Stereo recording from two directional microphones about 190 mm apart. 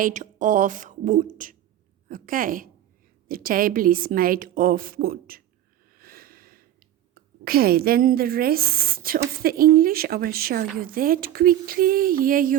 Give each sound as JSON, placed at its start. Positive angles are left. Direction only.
{"t": 0.0, "sound": "speech", "side_deg": -40}
{"t": 6.0, "sound": "a sound", "side_deg": -50}
{"t": 7.1, "sound": "speech", "side_deg": -50}